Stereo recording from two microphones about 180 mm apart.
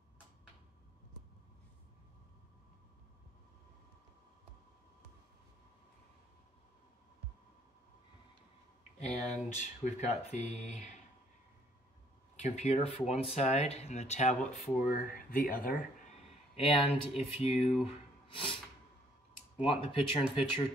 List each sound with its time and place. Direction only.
9.0 s speech: 40° left (ahead or behind)
12.4 s speech: 40° left (ahead or behind)
16.5 s speech: 30° left (ahead or behind)